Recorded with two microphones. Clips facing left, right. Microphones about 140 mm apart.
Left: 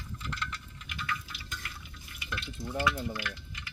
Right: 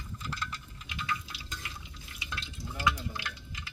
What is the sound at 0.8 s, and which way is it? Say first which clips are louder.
Stir: right 1 dB; 20° right (ahead or behind).